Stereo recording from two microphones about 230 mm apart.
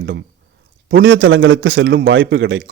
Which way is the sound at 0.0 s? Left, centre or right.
Right.